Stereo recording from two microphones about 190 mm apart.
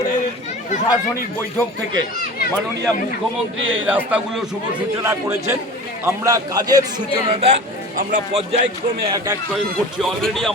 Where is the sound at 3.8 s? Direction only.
5° right (ahead or behind); by 8.6 s 30° right (ahead or behind).